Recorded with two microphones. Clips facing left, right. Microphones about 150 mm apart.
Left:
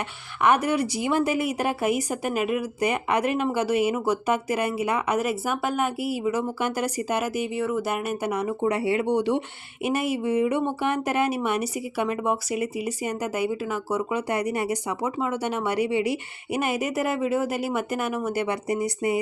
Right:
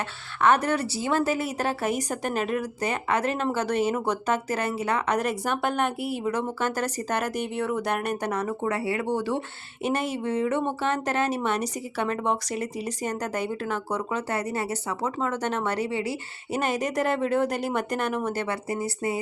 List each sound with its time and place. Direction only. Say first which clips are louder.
0.4 s speech: left 1 dB; 10° left (ahead or behind)